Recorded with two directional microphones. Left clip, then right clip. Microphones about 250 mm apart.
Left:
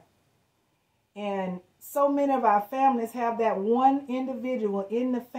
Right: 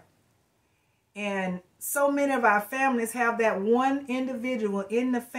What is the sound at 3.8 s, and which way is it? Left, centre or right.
Speech, centre.